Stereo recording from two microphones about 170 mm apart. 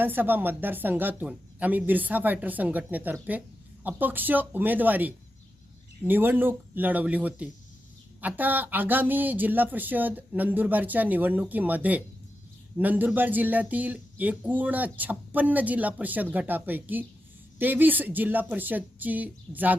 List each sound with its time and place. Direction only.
0.0 s speech: 10° right (ahead or behind)